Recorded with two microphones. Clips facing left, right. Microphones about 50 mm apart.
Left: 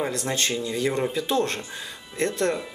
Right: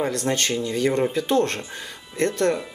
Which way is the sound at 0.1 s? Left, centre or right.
Right.